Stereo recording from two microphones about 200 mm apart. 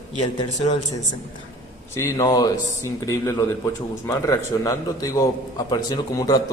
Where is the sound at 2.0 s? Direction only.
15° left (ahead or behind).